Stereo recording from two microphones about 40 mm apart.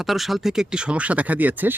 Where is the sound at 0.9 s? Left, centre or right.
Right.